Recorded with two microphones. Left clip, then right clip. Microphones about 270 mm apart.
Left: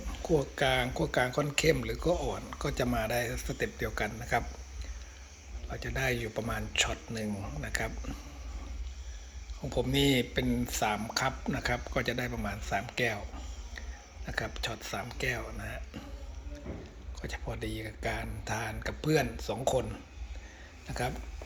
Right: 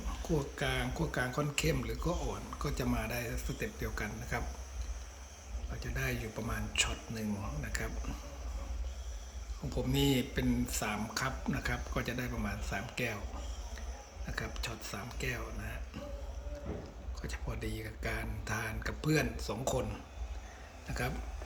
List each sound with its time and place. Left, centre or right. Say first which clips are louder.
0.3 s speech: left 7 dB; centre
2.0 s speech: left 8 dB; centre
2.3 s speech: left 4 dB; centre
5.7 s speech: left 6 dB; centre
9.6 s speech: left 5 dB; centre
14.3 s speech: left 5 dB; centre
17.2 s speech: left 5 dB; centre
20.9 s speech: left 3 dB; centre